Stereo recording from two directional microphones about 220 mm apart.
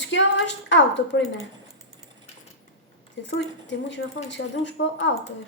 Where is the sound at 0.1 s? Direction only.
55° left (ahead or behind).